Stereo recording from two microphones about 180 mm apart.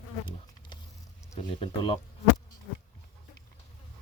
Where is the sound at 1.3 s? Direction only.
30° left (ahead or behind).